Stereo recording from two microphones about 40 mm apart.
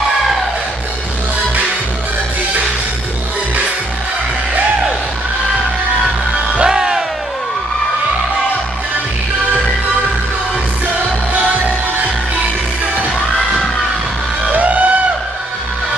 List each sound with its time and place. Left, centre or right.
6.6 s music: centre
14.5 s music: right